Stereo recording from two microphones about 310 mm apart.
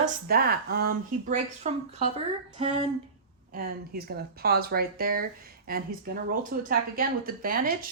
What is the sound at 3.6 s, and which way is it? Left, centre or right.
A woman's voice, right.